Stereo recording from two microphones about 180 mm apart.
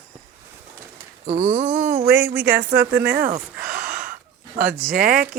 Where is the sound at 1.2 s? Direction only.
40° right (ahead or behind).